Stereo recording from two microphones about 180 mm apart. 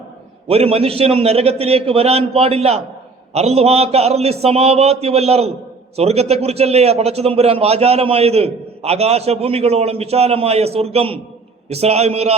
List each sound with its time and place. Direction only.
0.4 s a man's voice: 35° right (ahead or behind)